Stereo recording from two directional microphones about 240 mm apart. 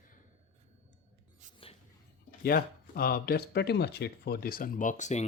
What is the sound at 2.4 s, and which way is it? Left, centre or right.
Speech, left.